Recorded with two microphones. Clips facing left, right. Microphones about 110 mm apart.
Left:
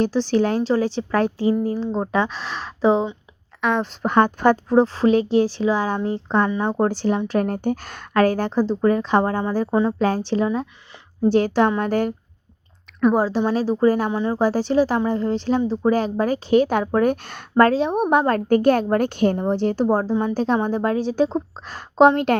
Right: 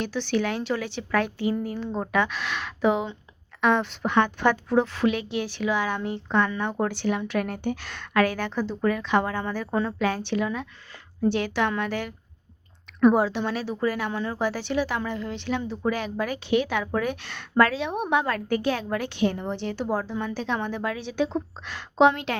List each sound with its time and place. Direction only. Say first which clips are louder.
0.0 s speech: left 7 dB; 35° left (ahead or behind)
3.6 s a sound: left 1 dB; centre (ahead or behind)
3.8 s speech: left 5 dB; 40° left (ahead or behind)
9.7 s speech: left 6 dB; 25° left (ahead or behind)
10.2 s a woman's voice: left 6 dB; 35° left (ahead or behind)
13.1 s speech: left 5 dB; 35° left (ahead or behind)
14.1 s speech: left 7 dB; 20° left (ahead or behind)
14.3 s a woman's voice: left 9 dB; 40° left (ahead or behind)